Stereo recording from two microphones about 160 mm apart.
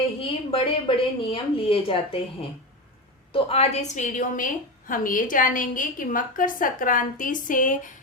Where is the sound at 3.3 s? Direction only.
40° left (ahead or behind).